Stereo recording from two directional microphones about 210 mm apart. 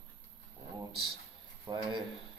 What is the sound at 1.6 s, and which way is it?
Speech, 20° right (ahead or behind).